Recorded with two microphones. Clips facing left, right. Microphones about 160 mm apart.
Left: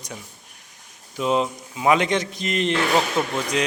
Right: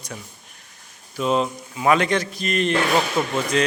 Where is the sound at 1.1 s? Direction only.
15° left (ahead or behind).